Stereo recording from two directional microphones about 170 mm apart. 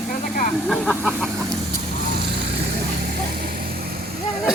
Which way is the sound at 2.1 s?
70° right (ahead or behind).